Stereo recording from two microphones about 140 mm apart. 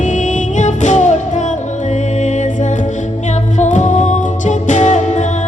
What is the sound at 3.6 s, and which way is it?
Music, 60° left (ahead or behind).